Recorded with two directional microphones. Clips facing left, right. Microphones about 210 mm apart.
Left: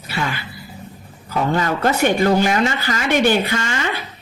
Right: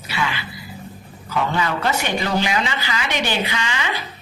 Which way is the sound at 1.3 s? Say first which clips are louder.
Left 3 dB; 45° left (ahead or behind).